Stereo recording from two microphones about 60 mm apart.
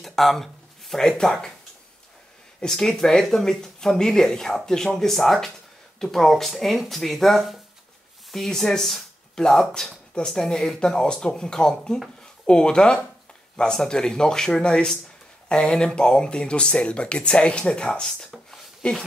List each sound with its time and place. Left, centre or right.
0.0 s speech: centre
2.6 s speech: centre
18.5 s a sound: centre